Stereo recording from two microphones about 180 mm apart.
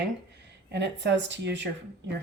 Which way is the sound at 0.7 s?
75° right (ahead or behind).